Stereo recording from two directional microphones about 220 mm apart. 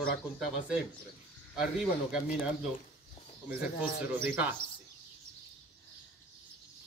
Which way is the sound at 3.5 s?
45° left (ahead or behind).